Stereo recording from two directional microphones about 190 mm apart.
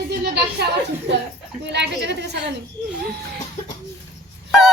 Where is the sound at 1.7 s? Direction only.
65° right (ahead or behind).